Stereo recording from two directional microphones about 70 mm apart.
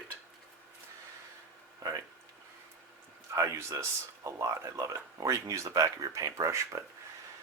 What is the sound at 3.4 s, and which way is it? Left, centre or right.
Speech, right.